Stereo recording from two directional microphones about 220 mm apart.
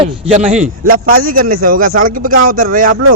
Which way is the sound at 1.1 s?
40° right (ahead or behind).